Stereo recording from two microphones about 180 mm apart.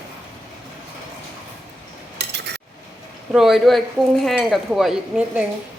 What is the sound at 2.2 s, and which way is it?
Cutlery, 70° right (ahead or behind).